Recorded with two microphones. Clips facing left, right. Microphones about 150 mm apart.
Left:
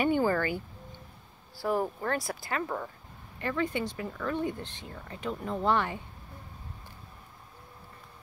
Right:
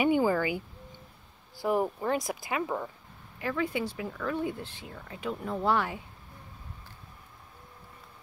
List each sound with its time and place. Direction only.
0.0 s speech: 10° right (ahead or behind)
1.6 s speech: 15° right (ahead or behind)